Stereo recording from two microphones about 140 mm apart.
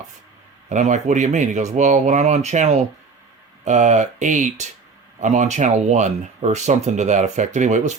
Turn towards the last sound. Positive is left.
turn(degrees=-60)  # may be behind; listen again after turning